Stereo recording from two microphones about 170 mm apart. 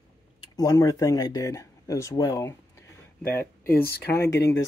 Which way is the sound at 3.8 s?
70° left (ahead or behind).